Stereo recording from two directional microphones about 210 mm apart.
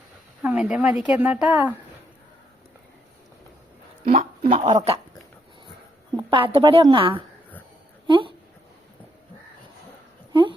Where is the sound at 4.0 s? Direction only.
40° right (ahead or behind).